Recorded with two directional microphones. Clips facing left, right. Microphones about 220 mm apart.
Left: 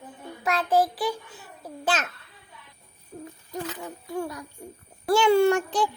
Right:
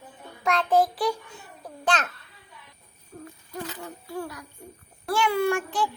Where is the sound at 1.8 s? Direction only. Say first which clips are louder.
Right 1 dB; 5° left (ahead or behind).